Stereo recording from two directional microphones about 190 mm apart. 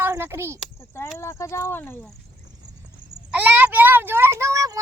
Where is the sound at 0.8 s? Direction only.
15° left (ahead or behind).